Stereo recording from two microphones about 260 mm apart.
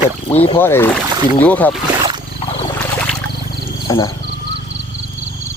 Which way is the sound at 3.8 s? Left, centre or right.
Centre.